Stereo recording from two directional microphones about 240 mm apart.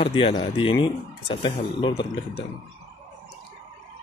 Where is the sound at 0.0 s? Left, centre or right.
Left.